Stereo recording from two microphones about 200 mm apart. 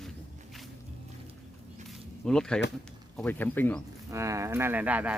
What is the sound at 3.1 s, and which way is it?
Speech, 10° left (ahead or behind).